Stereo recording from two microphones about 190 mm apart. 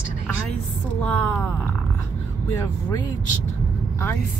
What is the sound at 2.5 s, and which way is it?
Speech, 15° left (ahead or behind).